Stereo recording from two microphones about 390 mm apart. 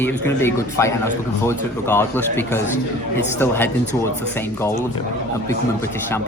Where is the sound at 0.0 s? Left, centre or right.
Centre.